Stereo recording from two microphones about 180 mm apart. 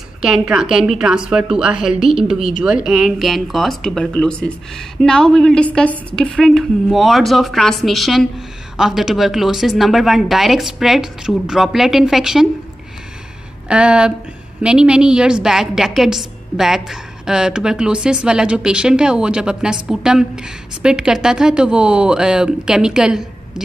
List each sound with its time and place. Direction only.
0.2 s speech: 5° right (ahead or behind)
13.7 s speech: 5° right (ahead or behind)